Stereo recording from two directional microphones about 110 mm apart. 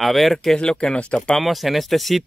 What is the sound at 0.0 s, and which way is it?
Speech, centre (ahead or behind).